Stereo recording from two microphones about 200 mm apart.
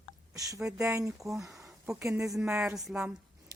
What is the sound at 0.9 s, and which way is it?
Speech, 15° right (ahead or behind).